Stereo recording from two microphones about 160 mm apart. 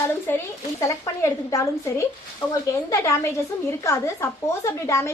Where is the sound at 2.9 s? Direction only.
20° left (ahead or behind).